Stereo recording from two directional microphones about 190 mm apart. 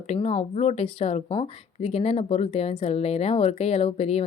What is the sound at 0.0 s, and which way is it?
A woman's voice, 35° left (ahead or behind).